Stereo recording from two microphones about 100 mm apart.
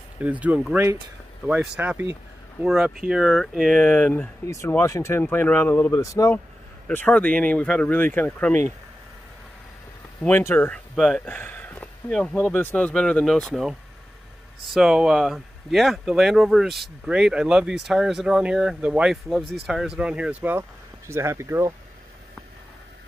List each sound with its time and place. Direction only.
0.2 s speech: 15° right (ahead or behind)
1.8 s speech: 20° right (ahead or behind)
2.7 s speech: 5° right (ahead or behind); by 4.3 s 10° left (ahead or behind)
4.5 s speech: 25° left (ahead or behind)
5.9 s speech: 30° left (ahead or behind)
6.9 s speech: 15° left (ahead or behind)
10.5 s speech: 15° left (ahead or behind)
11.0 s speech: centre (ahead or behind)
11.2 s a sound: 15° left (ahead or behind)
12.1 s speech: 5° left (ahead or behind); by 20.6 s 15° right (ahead or behind)
21.1 s speech: 25° right (ahead or behind)